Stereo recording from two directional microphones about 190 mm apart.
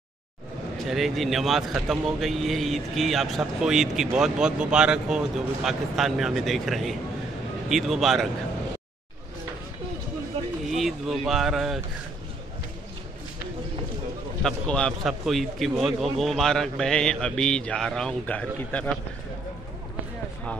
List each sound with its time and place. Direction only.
0.8 s speech: centre (ahead or behind)
10.8 s speech: centre (ahead or behind)
14.4 s speech: 5° left (ahead or behind)